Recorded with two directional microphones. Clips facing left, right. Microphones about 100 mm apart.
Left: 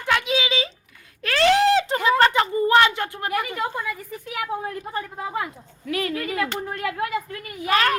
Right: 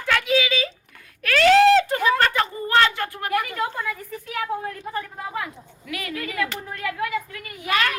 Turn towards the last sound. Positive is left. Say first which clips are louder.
# left 3 dB
turn(degrees=35)  # may be behind; listen again after turning